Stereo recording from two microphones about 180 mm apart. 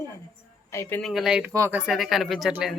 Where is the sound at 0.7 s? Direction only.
15° left (ahead or behind).